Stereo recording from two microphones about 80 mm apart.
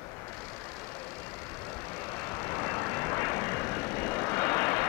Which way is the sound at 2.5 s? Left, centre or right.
Left.